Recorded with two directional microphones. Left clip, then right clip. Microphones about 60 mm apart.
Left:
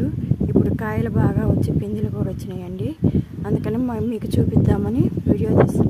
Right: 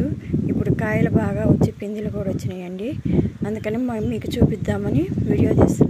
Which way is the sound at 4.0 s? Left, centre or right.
Left.